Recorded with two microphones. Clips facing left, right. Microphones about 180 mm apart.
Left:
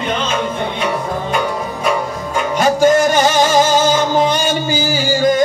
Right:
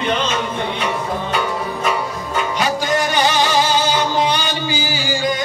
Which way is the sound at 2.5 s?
45° left (ahead or behind).